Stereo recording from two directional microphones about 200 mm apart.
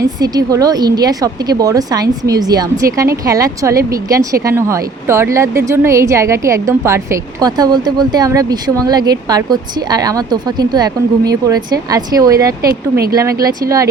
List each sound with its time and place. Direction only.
0.0 s speech: 15° right (ahead or behind)
12.6 s speech: 50° right (ahead or behind)
13.4 s speech: 15° right (ahead or behind)